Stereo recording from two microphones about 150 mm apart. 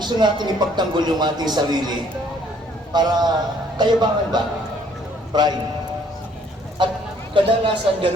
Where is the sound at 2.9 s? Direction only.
30° right (ahead or behind).